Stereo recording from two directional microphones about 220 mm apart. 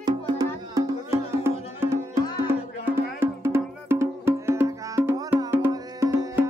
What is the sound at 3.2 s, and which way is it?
Music, 10° right (ahead or behind).